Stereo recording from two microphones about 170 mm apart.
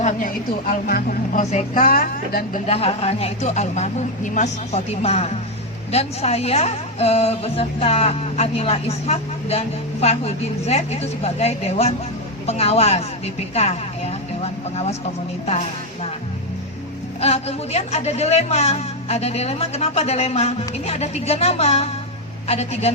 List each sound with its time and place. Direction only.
0.7 s a woman's voice: 55° left (ahead or behind)
2.6 s speech: 35° left (ahead or behind)
17.2 s speech: 40° left (ahead or behind)